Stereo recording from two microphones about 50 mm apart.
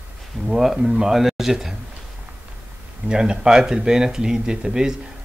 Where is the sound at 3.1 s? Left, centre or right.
Centre.